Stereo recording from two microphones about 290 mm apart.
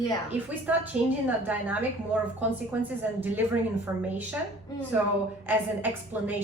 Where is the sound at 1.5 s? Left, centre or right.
Centre.